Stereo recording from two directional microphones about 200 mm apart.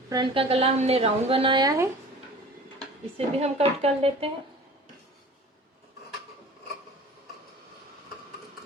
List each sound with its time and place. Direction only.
0.1 s a woman's voice: 25° right (ahead or behind)
3.2 s a woman's voice: 30° right (ahead or behind)